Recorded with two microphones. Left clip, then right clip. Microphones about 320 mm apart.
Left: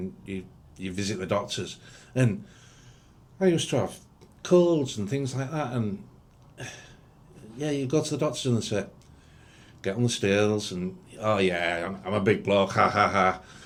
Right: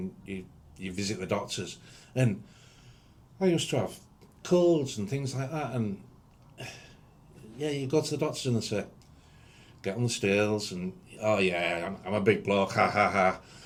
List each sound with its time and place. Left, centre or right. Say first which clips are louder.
0.3 s speech: left 3 dB; left
6.6 s a sound: left 3 dB; left
7.9 s speech: left 1 dB; left
11.5 s a man's voice: left 2 dB; left
11.8 s speech: left 3 dB; left